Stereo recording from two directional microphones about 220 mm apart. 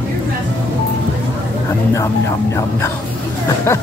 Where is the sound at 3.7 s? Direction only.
10° left (ahead or behind).